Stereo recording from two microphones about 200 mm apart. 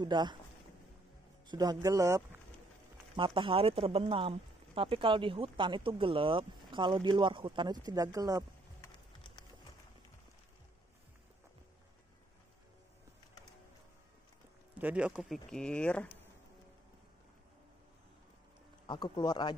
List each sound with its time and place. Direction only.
0.0 s speech: 20° right (ahead or behind)
1.5 s speech: 20° right (ahead or behind)
14.8 s speech: 5° right (ahead or behind)
18.9 s speech: 25° left (ahead or behind)